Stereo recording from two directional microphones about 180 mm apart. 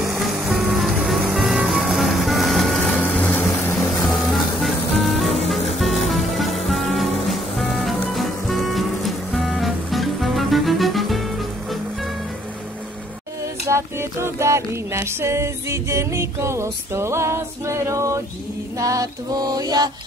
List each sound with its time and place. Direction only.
0.0 s music: centre (ahead or behind)
13.7 s music: 15° right (ahead or behind)